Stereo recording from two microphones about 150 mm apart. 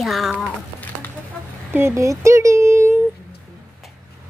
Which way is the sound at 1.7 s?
15° right (ahead or behind).